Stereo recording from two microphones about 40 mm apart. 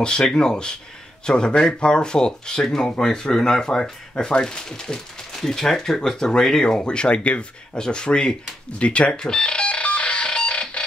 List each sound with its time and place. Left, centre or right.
0.2 s speech: centre
9.1 s doorbell: centre
10.5 s fire alarm: left